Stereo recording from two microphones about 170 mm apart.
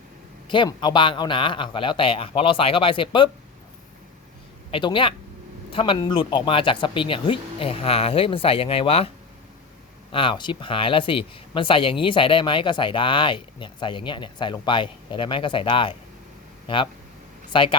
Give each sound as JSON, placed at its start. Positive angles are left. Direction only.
{"t": 0.5, "sound": "speech", "side_deg": 25}
{"t": 4.7, "sound": "speech", "side_deg": 30}
{"t": 10.1, "sound": "speech", "side_deg": 30}